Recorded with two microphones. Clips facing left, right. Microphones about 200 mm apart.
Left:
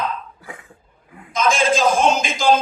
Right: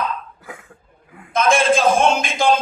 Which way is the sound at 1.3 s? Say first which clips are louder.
Right 2 dB; 55° right (ahead or behind).